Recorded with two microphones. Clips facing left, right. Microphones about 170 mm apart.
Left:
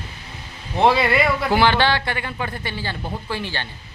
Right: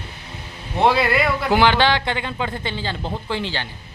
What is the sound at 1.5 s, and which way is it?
Speech, 15° right (ahead or behind).